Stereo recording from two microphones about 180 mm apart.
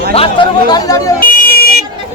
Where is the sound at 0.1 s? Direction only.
30° left (ahead or behind).